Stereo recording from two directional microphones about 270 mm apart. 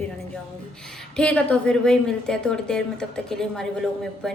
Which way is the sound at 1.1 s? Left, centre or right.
Centre.